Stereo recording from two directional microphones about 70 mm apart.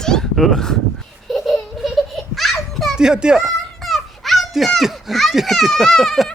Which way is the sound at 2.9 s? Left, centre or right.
Centre.